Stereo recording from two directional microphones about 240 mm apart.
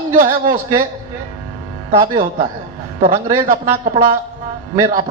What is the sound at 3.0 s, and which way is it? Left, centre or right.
A man's voice, right.